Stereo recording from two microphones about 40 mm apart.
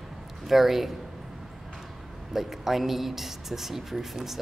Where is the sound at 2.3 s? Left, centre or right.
Centre.